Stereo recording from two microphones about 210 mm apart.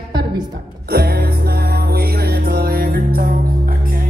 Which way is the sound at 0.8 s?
45° right (ahead or behind).